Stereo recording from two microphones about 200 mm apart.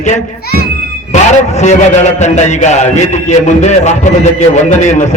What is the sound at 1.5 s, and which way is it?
A man's voice, 35° left (ahead or behind).